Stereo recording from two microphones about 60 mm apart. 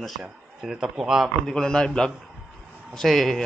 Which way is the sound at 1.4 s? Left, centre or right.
Centre.